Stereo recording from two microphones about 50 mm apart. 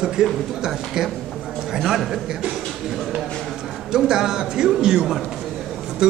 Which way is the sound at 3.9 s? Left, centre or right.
Centre.